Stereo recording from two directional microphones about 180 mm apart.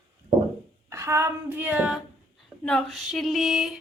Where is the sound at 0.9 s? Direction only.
15° right (ahead or behind).